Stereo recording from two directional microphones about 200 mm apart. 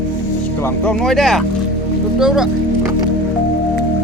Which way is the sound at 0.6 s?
10° left (ahead or behind).